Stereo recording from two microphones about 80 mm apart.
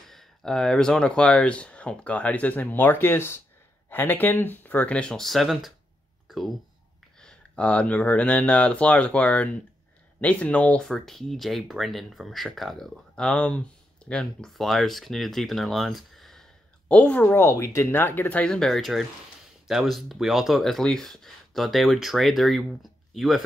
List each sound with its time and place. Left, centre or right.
0.0 s speech: centre
6.2 s a sound: centre
7.2 s speech: centre
10.8 s speech: centre
16.9 s speech: centre
18.4 s speech: centre